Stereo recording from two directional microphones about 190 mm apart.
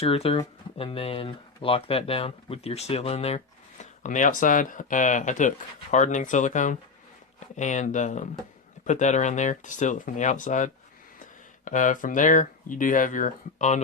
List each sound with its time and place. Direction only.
0.0 s speech: 30° left (ahead or behind)